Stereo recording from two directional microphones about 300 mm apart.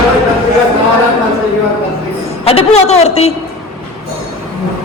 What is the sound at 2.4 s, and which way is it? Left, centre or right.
Speech, centre.